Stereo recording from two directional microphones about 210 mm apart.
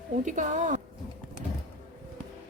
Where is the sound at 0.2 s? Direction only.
35° right (ahead or behind).